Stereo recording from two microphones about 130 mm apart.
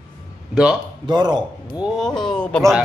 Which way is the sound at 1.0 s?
35° right (ahead or behind).